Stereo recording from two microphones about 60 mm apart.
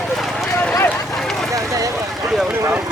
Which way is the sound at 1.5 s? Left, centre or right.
Right.